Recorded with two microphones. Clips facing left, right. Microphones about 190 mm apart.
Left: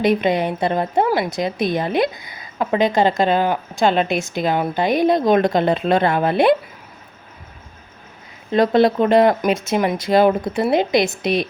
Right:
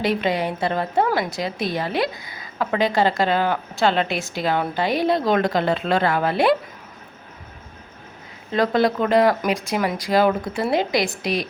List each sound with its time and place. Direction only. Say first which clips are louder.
0.0 s a woman's voice: left 4 dB; 20° left (ahead or behind)
8.4 s a woman's voice: left 4 dB; 20° left (ahead or behind)